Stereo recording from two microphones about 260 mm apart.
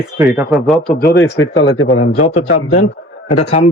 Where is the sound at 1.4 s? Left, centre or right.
Left.